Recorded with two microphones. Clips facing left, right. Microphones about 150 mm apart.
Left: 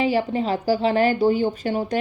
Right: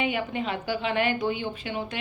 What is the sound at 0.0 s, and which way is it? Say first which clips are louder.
A woman's voice: left 7 dB; 35° left (ahead or behind).